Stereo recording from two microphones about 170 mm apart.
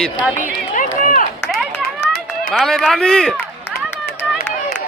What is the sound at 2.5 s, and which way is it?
Speech, centre (ahead or behind).